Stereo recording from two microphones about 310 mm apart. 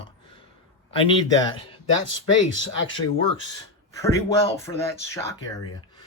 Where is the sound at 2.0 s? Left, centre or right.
Left.